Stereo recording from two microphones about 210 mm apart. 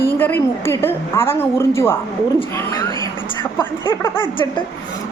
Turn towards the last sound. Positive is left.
turn(degrees=25)  # may be behind; listen again after turning